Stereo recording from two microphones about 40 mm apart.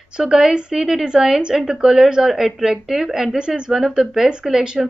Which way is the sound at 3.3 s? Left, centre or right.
Right.